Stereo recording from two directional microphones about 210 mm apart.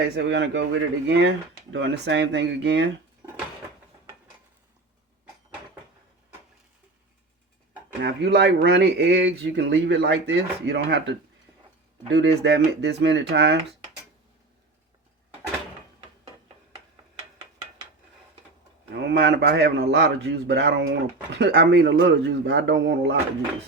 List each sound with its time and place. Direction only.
0.2 s speech: 60° right (ahead or behind)
8.0 s a man's voice: 50° right (ahead or behind)
18.9 s a man's voice: 50° right (ahead or behind)